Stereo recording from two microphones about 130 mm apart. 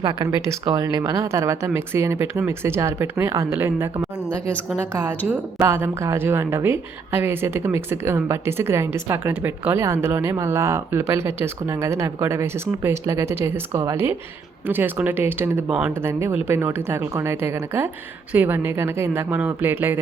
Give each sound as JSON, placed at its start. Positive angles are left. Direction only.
{"t": 0.0, "sound": "a woman's voice", "side_deg": -30}
{"t": 5.5, "sound": "a woman's voice", "side_deg": -20}